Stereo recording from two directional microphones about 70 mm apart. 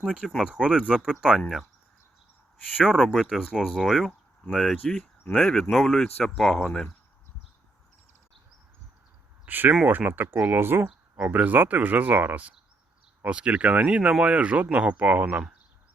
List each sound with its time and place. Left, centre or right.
0.0 s speech: centre
2.7 s speech: centre
9.5 s speech: right